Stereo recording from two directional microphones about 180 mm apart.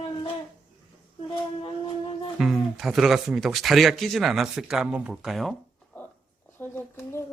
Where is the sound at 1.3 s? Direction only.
30° left (ahead or behind).